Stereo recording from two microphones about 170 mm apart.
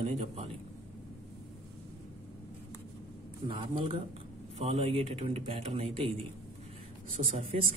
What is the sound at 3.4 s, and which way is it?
Speech, 30° right (ahead or behind).